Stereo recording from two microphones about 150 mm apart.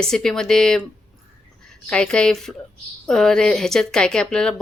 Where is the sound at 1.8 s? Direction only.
5° left (ahead or behind).